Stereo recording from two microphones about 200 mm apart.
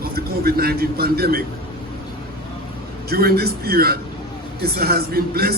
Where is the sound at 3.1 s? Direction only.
50° right (ahead or behind).